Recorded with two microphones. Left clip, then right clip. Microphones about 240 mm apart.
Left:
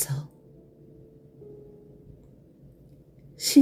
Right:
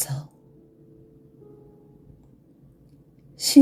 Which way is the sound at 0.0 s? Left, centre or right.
Right.